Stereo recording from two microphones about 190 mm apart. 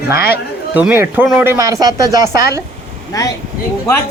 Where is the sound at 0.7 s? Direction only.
10° right (ahead or behind).